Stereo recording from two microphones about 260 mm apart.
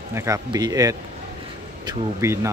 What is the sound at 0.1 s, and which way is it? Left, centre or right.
Speech, centre.